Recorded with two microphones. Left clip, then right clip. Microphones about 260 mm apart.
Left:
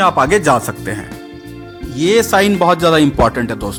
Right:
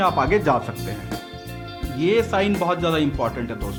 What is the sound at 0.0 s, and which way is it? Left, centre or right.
Speech, left.